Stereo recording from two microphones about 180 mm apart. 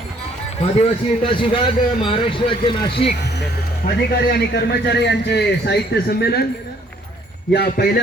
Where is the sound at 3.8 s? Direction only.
60° left (ahead or behind).